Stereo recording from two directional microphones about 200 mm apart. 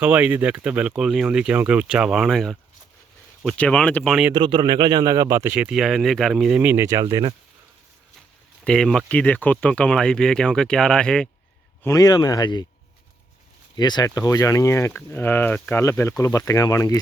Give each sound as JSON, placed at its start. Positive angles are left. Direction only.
{"t": 0.0, "sound": "speech", "side_deg": -10}
{"t": 4.4, "sound": "speech", "side_deg": -25}
{"t": 8.6, "sound": "speech", "side_deg": 5}
{"t": 11.8, "sound": "speech", "side_deg": 15}
{"t": 13.7, "sound": "speech", "side_deg": 20}